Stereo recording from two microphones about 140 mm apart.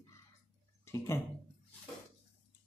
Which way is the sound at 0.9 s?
25° left (ahead or behind).